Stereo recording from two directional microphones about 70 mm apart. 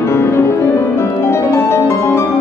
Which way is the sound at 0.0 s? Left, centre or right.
Left.